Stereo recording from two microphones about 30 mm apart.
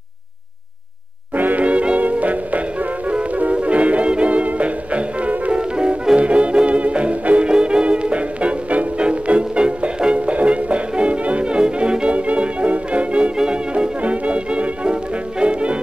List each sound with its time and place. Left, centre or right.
1.3 s music: right
1.6 s music: right
2.0 s music: right
5.5 s music: right
7.4 s music: right
7.8 s music: right
12.1 s music: right